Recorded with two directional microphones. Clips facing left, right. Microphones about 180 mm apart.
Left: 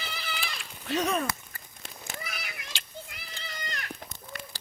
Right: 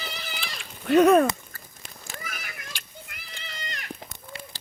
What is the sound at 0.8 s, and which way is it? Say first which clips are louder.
Speech: right 12 dB; 55° right (ahead or behind).